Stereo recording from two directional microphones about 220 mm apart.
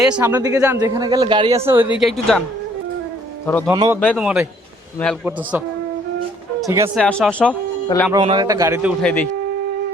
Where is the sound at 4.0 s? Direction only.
Centre (ahead or behind).